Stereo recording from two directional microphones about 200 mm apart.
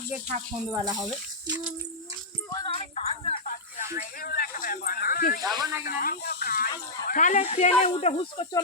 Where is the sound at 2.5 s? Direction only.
25° left (ahead or behind).